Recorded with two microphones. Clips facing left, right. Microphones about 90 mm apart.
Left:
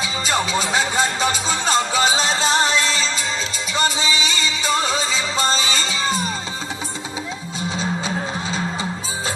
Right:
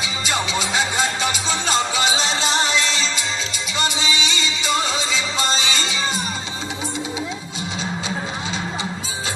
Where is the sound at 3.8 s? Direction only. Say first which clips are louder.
Left 2 dB; 40° left (ahead or behind).